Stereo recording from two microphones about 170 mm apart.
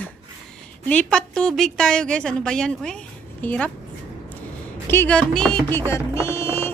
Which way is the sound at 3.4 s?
5° left (ahead or behind).